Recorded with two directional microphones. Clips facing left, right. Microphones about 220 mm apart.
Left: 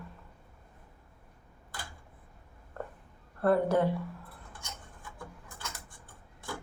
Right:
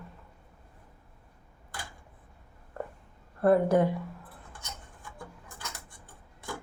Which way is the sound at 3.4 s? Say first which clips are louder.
Right 3 dB; 15° right (ahead or behind).